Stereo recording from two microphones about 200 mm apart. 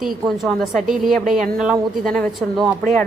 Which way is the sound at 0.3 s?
Centre (ahead or behind).